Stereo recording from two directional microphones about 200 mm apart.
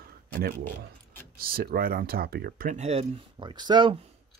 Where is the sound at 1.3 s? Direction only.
45° right (ahead or behind); by 4.1 s 25° right (ahead or behind).